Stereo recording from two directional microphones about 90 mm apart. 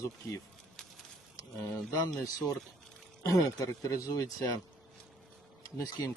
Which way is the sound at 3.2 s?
40° left (ahead or behind).